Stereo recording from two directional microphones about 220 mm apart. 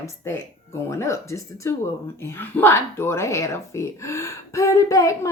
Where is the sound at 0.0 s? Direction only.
10° left (ahead or behind).